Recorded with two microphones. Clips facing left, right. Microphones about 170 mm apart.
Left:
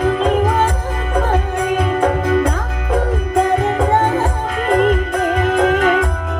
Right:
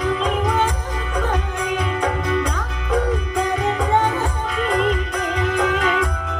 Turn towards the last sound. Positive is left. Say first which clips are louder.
# left 6 dB
turn(degrees=50)  # may be behind; listen again after turning